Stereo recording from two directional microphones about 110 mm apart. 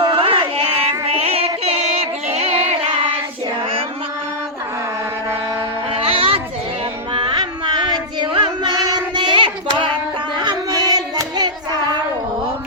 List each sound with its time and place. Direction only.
0.0 s music: 55° right (ahead or behind)
5.9 s a sound: 60° right (ahead or behind)
7.1 s music: 50° right (ahead or behind)
8.2 s child singing: 45° right (ahead or behind)
10.4 s hands: 40° right (ahead or behind)